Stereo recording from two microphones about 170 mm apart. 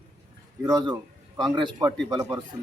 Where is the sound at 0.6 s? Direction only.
25° right (ahead or behind).